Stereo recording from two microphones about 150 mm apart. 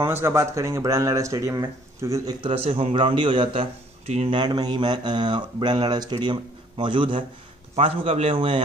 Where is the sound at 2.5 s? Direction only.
40° right (ahead or behind).